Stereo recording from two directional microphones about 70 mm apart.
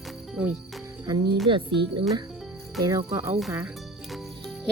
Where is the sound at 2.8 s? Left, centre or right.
Right.